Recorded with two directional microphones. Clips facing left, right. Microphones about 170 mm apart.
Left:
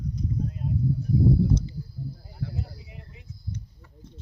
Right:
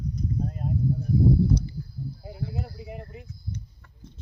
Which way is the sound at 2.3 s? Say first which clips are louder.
Right 3 dB; 65° right (ahead or behind).